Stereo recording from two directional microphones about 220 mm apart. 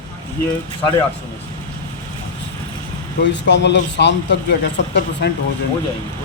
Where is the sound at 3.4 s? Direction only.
55° left (ahead or behind).